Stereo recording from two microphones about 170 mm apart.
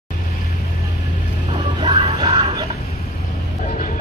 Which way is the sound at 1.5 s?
25° right (ahead or behind).